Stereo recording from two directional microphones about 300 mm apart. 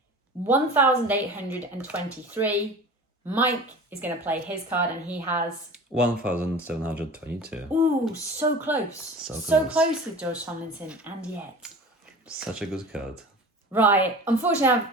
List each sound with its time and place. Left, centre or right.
0.4 s a woman's voice: centre